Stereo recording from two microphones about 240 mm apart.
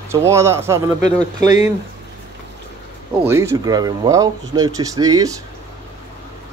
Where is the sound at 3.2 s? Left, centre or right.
Centre.